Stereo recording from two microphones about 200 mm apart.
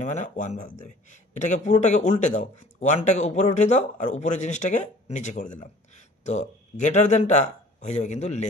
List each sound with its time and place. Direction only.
0.0 s speech: 35° left (ahead or behind)